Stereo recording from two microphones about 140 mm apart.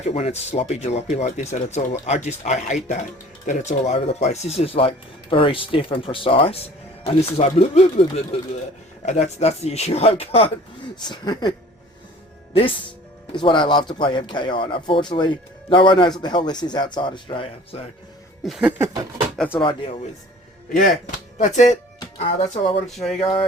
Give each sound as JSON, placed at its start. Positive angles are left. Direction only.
{"t": 0.1, "sound": "speech", "side_deg": 50}
{"t": 11.1, "sound": "speech", "side_deg": 30}
{"t": 12.5, "sound": "speech", "side_deg": 40}
{"t": 18.4, "sound": "a sound", "side_deg": -5}
{"t": 19.5, "sound": "speech", "side_deg": 40}
{"t": 21.3, "sound": "speech", "side_deg": 55}
{"t": 22.2, "sound": "speech", "side_deg": 40}